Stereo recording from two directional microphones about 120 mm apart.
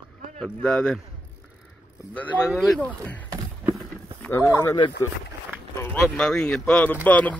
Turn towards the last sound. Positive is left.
turn(degrees=10)  # may be behind; listen again after turning